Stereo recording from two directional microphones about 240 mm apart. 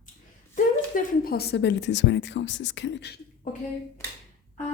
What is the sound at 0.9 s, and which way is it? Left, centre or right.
A woman's voice, left.